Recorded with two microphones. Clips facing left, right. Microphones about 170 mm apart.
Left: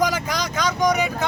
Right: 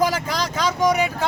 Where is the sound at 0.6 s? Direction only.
30° right (ahead or behind).